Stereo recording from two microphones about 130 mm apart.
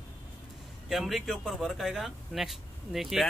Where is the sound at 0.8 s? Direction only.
Centre (ahead or behind).